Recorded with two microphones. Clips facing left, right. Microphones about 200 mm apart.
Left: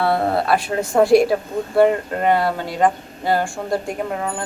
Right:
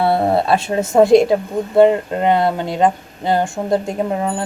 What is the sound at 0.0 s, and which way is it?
Speech, 25° right (ahead or behind).